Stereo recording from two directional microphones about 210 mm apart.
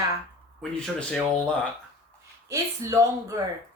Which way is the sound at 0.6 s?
5° left (ahead or behind).